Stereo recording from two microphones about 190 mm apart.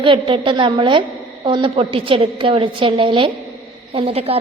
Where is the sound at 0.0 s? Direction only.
25° right (ahead or behind).